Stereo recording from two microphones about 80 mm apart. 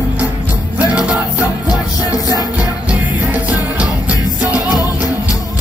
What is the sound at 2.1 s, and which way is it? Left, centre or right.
Music, left.